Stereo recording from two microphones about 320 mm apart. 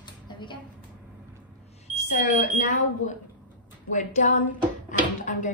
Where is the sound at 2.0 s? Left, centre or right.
Left.